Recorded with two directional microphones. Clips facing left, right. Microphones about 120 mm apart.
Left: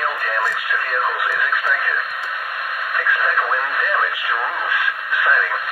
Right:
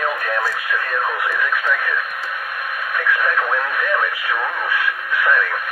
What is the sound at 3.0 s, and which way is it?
Radio, 15° left (ahead or behind).